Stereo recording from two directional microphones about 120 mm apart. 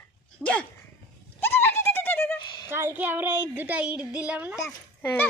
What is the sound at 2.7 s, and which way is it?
A woman's voice, 15° right (ahead or behind).